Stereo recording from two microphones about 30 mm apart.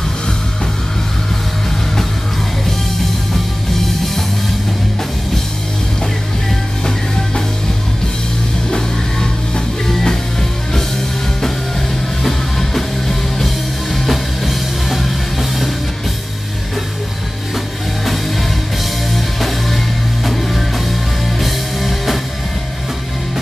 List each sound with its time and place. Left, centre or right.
8.6 s music: left
12.2 s music: centre
19.1 s music: centre